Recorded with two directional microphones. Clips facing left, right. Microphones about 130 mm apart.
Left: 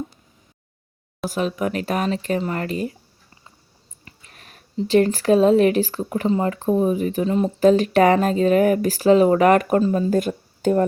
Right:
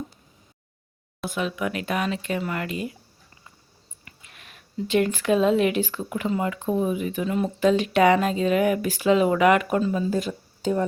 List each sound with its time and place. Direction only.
1.3 s speech: 40° left (ahead or behind)
4.0 s a sound: 40° left (ahead or behind)
4.8 s speech: 35° left (ahead or behind); by 10.8 s 55° left (ahead or behind)